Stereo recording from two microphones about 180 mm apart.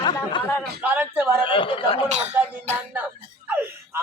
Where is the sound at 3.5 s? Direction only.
10° right (ahead or behind).